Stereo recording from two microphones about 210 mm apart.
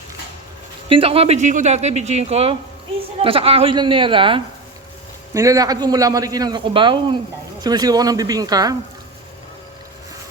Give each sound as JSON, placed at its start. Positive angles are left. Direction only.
{"t": 0.9, "sound": "a man's voice", "side_deg": -25}